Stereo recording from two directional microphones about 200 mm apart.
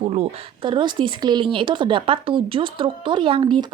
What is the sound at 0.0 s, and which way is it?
Speech, 30° right (ahead or behind).